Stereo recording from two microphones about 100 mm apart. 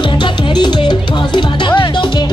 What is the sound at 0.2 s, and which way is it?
Music, 55° left (ahead or behind).